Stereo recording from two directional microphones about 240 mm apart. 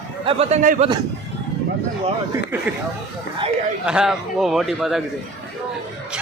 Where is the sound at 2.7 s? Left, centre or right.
Centre.